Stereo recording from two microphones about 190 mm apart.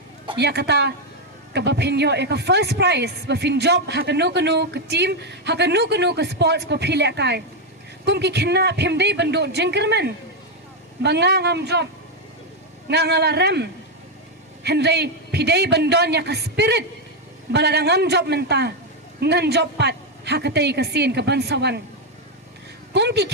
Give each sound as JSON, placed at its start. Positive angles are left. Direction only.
{"t": 0.3, "sound": "a man's voice", "side_deg": -60}
{"t": 12.9, "sound": "a man's voice", "side_deg": -60}
{"t": 22.9, "sound": "a woman's voice", "side_deg": -65}